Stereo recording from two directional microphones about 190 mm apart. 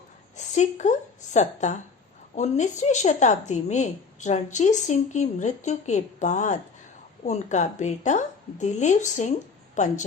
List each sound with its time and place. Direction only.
0.3 s a woman's voice: 40° left (ahead or behind)